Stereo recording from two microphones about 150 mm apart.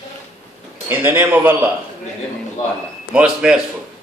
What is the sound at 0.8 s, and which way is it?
Speech, 15° right (ahead or behind).